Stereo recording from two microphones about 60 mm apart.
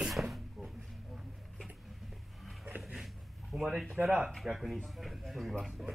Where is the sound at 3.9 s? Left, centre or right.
Right.